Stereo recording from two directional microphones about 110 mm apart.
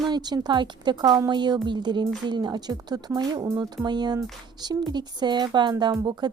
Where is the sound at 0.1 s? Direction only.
40° right (ahead or behind).